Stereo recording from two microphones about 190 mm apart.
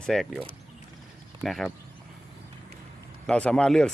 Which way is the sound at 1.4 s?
Centre (ahead or behind).